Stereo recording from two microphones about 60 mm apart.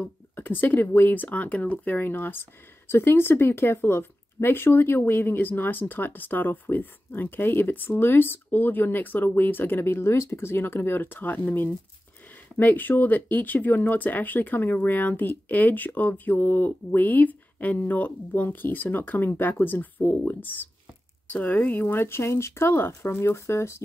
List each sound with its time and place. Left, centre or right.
0.4 s speech: left